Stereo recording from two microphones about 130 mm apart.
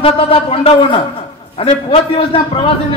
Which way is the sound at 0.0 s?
45° left (ahead or behind).